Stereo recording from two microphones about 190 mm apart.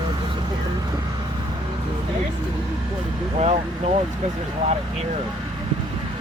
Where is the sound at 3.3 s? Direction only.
35° right (ahead or behind).